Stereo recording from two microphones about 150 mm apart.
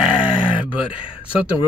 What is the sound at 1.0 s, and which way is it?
Speech, 35° left (ahead or behind).